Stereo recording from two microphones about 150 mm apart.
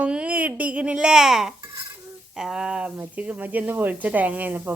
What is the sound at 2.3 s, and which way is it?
A woman's voice, 5° right (ahead or behind).